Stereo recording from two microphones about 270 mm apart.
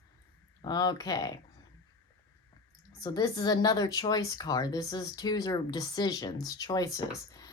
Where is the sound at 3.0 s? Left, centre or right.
Centre.